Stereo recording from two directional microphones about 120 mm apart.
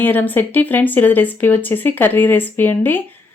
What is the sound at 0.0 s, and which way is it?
Speech, 15° left (ahead or behind).